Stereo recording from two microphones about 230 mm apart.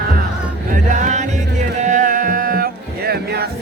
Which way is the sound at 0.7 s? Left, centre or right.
Right.